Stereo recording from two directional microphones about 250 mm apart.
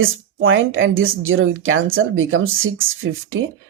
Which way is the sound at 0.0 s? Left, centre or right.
Right.